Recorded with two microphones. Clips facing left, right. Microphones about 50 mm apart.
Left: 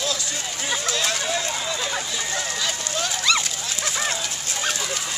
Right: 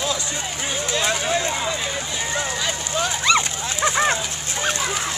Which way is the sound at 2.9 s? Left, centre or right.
Centre.